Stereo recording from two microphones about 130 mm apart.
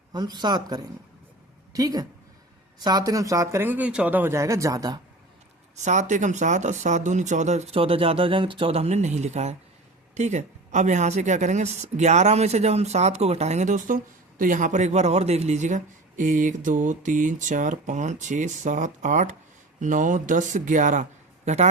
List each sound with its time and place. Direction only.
0.1 s a man's voice: 35° right (ahead or behind)
5.7 s a woman's voice: 65° right (ahead or behind)